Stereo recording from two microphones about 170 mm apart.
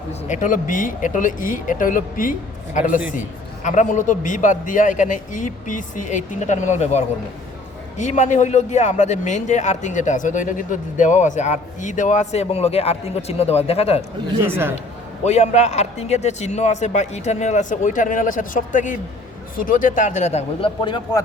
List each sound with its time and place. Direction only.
0.1 s speech: 45° left (ahead or behind)
14.4 s a man's voice: 15° right (ahead or behind)
15.2 s speech: 40° left (ahead or behind); by 21.2 s 25° left (ahead or behind)